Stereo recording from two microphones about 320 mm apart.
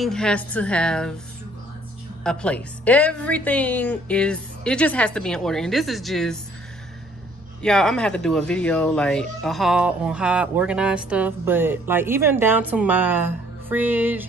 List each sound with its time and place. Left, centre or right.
0.0 s speech: centre
2.2 s speech: centre
7.6 s speech: centre